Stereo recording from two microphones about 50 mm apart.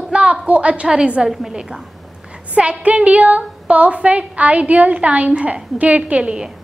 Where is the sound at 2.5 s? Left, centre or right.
Right.